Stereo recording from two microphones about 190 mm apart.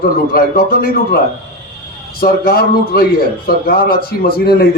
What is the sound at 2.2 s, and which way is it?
A man's voice, 50° left (ahead or behind).